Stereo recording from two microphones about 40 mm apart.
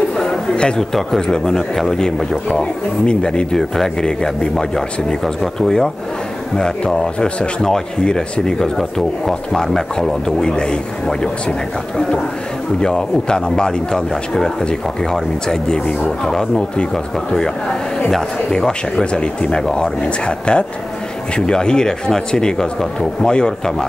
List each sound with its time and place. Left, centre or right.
0.7 s speech: centre
8.7 s speech: centre
12.8 s speech: centre
18.5 s speech: centre